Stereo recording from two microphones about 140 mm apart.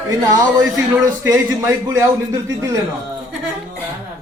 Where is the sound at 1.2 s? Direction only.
20° right (ahead or behind).